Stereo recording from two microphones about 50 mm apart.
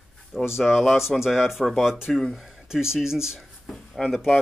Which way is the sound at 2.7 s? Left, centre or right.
Centre.